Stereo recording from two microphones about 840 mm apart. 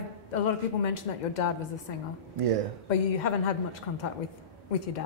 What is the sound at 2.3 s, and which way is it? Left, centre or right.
Speech, right.